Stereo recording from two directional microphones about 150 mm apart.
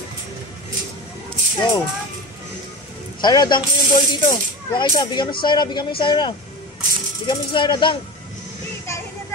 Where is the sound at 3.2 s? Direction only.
30° left (ahead or behind).